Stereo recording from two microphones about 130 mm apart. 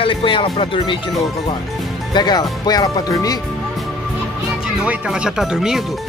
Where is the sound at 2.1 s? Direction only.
30° left (ahead or behind).